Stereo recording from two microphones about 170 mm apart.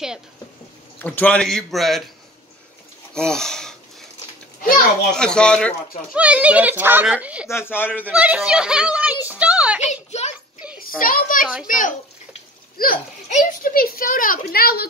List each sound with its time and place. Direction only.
0.9 s a man's voice: 10° left (ahead or behind)
3.2 s a man's voice: 5° left (ahead or behind)
5.1 s a man's voice: 5° left (ahead or behind)
6.1 s a child's voice: 10° right (ahead or behind)
7.4 s speech: 15° left (ahead or behind)
8.1 s a child's voice: 10° right (ahead or behind)
9.2 s a sound: 10° right (ahead or behind)
10.8 s a child's voice: 55° left (ahead or behind)